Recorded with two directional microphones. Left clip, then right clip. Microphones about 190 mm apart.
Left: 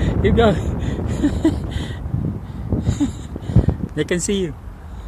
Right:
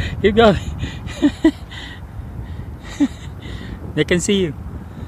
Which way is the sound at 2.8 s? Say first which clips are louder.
Right 5 dB; 5° right (ahead or behind).